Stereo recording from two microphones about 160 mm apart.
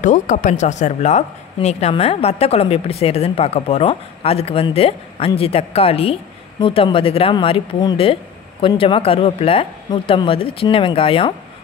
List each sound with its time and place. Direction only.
0.0 s speech: 50° left (ahead or behind); by 11.3 s 35° left (ahead or behind)